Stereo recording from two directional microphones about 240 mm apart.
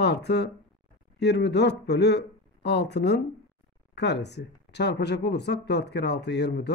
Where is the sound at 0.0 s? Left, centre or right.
Left.